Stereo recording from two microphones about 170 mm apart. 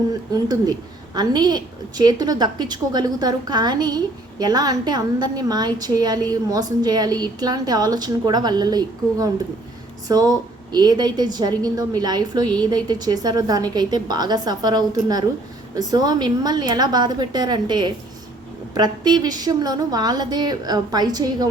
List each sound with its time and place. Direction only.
0.1 s a woman's voice: 20° right (ahead or behind)